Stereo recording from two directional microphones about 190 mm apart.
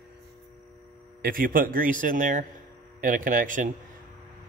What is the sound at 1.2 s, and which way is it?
A man's voice, 50° right (ahead or behind).